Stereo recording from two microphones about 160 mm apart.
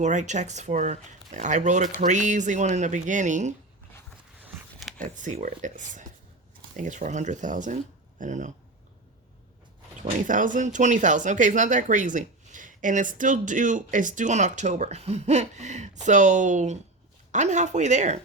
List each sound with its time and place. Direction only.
0.0 s speech: 50° right (ahead or behind)
4.4 s a sound: 10° right (ahead or behind)
4.9 s speech: 50° right (ahead or behind)
10.0 s speech: 55° right (ahead or behind)